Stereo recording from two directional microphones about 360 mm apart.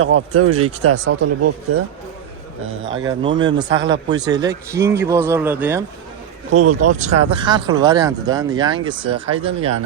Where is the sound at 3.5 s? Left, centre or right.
Right.